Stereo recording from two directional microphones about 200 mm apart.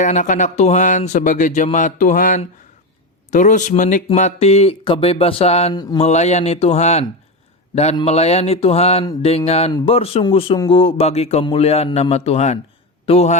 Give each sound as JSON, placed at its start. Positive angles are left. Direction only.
{"t": 0.0, "sound": "speech", "side_deg": 40}
{"t": 5.7, "sound": "speech", "side_deg": 20}
{"t": 6.0, "sound": "a man's voice", "side_deg": 35}